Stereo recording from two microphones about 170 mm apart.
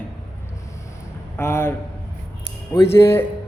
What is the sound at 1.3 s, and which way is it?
Speech, 15° left (ahead or behind).